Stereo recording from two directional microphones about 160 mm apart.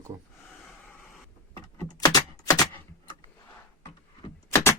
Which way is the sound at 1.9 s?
25° left (ahead or behind).